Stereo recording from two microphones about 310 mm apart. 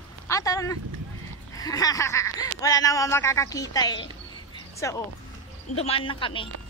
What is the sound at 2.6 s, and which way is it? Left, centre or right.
Speech, centre.